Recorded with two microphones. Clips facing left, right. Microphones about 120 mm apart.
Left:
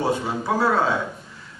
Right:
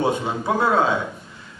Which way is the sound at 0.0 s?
20° right (ahead or behind).